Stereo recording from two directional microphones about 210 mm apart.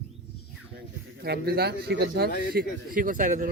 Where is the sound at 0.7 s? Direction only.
50° right (ahead or behind).